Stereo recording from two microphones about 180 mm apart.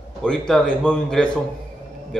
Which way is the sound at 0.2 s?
5° left (ahead or behind).